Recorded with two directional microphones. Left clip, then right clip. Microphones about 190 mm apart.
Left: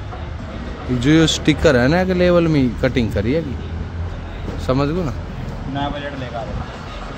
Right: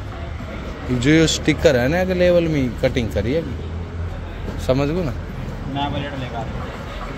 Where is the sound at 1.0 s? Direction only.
20° left (ahead or behind).